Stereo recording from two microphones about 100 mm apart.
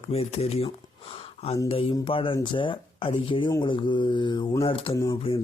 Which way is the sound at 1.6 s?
70° left (ahead or behind).